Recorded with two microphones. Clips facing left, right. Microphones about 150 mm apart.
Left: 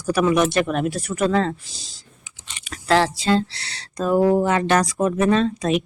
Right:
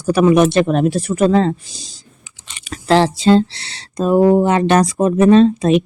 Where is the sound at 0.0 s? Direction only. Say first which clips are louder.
Right 6 dB; 25° right (ahead or behind).